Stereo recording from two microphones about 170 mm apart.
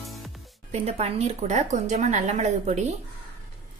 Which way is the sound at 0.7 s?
40° right (ahead or behind).